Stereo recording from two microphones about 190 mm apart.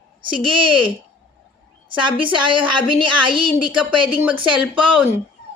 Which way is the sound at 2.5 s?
25° right (ahead or behind).